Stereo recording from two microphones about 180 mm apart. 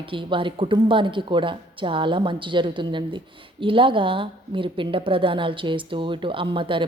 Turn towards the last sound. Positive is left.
turn(degrees=-30)  # may be behind; listen again after turning